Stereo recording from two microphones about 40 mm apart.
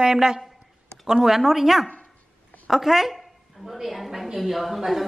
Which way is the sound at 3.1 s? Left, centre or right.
Centre.